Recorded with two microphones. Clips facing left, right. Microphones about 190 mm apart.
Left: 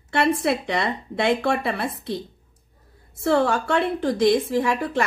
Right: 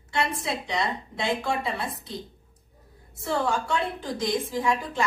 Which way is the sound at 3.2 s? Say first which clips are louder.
Left 7 dB; 70° left (ahead or behind).